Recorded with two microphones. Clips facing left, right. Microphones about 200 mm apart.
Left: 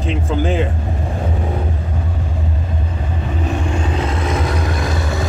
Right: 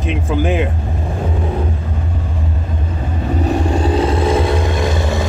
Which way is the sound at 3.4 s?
35° right (ahead or behind).